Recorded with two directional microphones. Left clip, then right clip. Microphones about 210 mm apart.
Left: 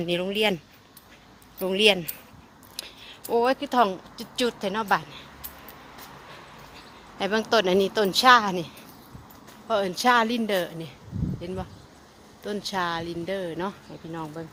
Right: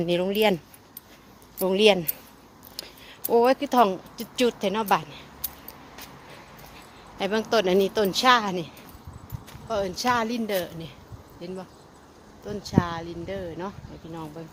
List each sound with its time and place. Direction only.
0.0 s speech: 15° right (ahead or behind)
7.2 s a woman's voice: 10° left (ahead or behind)
9.6 s speech: 40° left (ahead or behind)
12.5 s speech: 45° left (ahead or behind)